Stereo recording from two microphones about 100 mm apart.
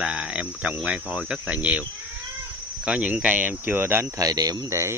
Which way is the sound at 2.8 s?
10° right (ahead or behind).